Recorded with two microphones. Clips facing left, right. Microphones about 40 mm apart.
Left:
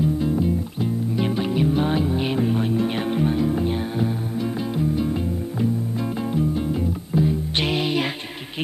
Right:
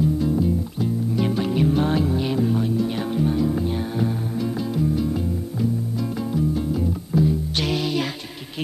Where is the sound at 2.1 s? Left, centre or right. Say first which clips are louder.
Even; left.